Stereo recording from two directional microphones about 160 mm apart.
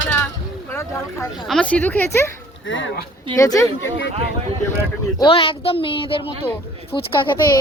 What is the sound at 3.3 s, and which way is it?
Speech, 20° left (ahead or behind).